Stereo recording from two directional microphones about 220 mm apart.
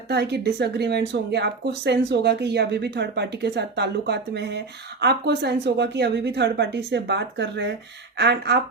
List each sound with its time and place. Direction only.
0.1 s speech: 50° right (ahead or behind)